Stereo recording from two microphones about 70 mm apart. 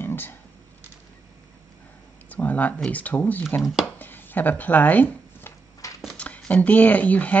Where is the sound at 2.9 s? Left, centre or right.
Left.